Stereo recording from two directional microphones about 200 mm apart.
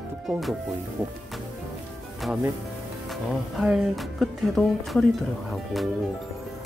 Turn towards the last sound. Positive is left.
turn(degrees=0)  # may be behind; listen again after turning